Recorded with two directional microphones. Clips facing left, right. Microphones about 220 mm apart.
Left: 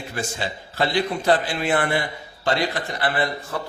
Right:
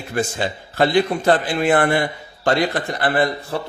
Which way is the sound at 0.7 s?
55° right (ahead or behind).